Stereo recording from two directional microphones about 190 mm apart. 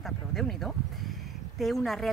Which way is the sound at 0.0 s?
Centre (ahead or behind).